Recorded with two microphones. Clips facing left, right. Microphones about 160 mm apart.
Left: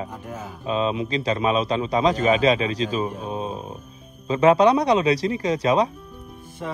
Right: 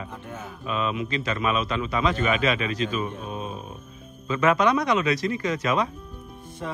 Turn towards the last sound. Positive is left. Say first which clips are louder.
# left 2 dB
turn(degrees=0)  # may be behind; listen again after turning